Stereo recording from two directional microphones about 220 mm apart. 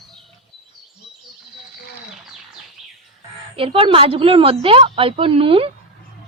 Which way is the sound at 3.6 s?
25° right (ahead or behind).